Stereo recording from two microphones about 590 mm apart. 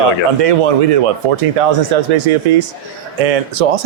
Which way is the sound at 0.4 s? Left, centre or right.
Right.